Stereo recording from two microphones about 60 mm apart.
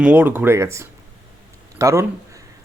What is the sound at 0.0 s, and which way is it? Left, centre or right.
Speech, right.